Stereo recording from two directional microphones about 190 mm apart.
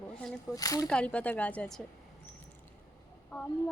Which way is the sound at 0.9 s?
5° left (ahead or behind).